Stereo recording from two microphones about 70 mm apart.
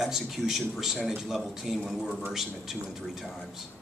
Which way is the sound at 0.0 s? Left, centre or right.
Centre.